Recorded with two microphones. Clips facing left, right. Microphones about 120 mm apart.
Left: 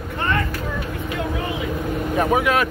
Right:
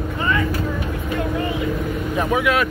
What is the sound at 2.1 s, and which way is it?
Speech, 40° left (ahead or behind).